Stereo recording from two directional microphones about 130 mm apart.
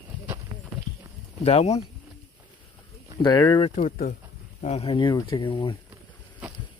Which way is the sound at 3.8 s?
85° left.